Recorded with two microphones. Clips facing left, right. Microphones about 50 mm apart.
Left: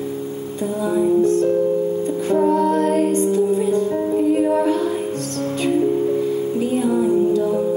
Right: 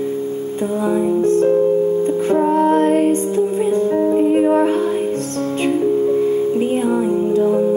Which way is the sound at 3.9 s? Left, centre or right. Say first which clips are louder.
Right 5 dB; right.